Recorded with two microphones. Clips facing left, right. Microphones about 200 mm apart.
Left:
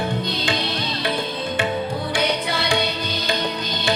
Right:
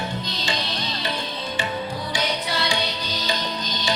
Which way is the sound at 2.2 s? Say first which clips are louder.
Left 3 dB; 55° left (ahead or behind).